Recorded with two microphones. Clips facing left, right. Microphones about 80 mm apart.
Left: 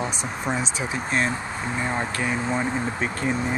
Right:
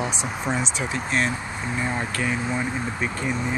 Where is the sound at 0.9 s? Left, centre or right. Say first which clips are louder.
Even; left.